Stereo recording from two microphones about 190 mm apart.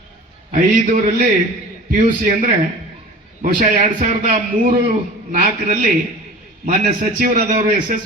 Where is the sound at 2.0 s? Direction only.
40° right (ahead or behind).